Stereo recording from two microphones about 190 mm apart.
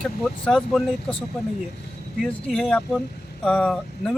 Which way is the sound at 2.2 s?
5° left (ahead or behind).